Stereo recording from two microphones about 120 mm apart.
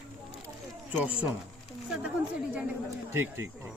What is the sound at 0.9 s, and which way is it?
Speech, 10° right (ahead or behind).